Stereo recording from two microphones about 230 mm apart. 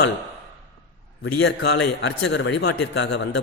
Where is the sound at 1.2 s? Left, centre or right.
Left.